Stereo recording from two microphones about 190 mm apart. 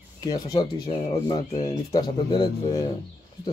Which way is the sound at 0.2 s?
20° left (ahead or behind).